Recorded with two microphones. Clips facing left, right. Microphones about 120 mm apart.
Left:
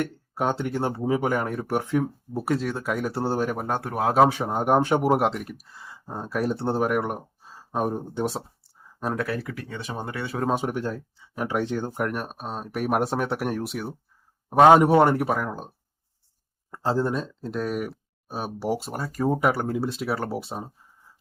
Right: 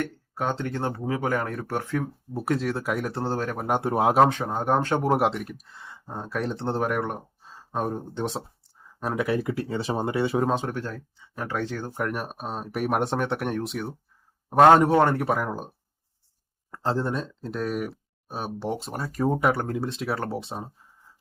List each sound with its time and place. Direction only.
0.0 s speech: 10° left (ahead or behind)
2.3 s speech: centre (ahead or behind)
3.7 s speech: 20° right (ahead or behind)
4.3 s speech: 10° left (ahead or behind)
9.1 s speech: 20° right (ahead or behind)
10.5 s speech: 15° left (ahead or behind)
11.9 s speech: centre (ahead or behind)
16.7 s speech: 5° left (ahead or behind)